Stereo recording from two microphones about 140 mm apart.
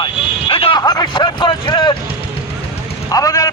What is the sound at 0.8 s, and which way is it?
Speech, 30° left (ahead or behind).